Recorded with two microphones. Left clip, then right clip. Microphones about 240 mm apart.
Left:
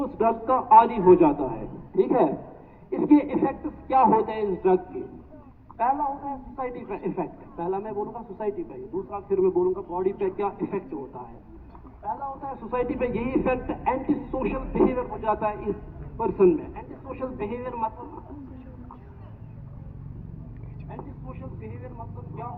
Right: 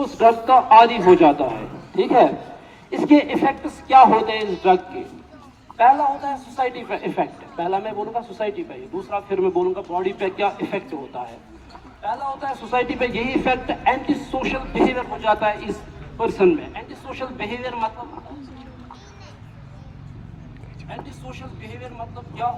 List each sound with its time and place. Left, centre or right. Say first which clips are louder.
0.0 s a man's voice: right 8 dB; right
12.5 s speech: right 6 dB; right